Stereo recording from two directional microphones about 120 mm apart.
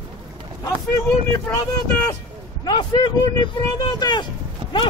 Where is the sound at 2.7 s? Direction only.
40° left (ahead or behind).